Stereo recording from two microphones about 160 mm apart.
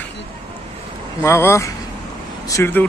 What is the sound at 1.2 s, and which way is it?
Speech, 15° left (ahead or behind).